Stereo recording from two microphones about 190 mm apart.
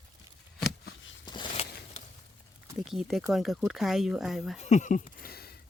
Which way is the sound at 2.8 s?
Centre (ahead or behind).